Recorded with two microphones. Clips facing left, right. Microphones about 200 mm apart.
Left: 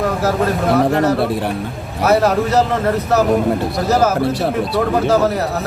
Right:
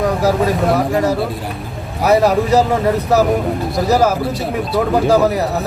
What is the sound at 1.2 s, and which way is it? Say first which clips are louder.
Speech: left 4 dB; centre (ahead or behind).